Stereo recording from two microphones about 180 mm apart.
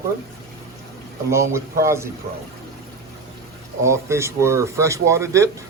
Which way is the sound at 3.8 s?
15° right (ahead or behind).